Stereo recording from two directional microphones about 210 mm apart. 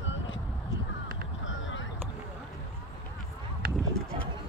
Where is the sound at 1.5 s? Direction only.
65° left (ahead or behind).